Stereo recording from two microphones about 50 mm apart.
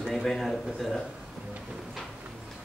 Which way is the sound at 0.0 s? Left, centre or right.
Centre.